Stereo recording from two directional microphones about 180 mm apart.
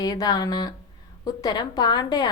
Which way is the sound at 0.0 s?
20° left (ahead or behind).